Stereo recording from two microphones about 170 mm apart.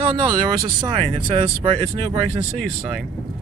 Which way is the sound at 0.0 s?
30° right (ahead or behind).